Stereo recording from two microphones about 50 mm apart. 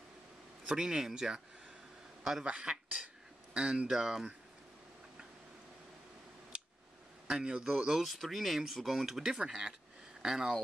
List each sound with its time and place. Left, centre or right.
0.7 s speech: centre
2.4 s speech: centre
7.2 s speech: centre
7.9 s speech: centre